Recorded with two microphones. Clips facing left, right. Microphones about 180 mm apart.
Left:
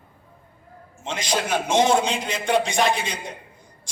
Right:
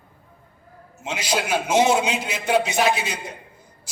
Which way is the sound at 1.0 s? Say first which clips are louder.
Even; 10° right (ahead or behind).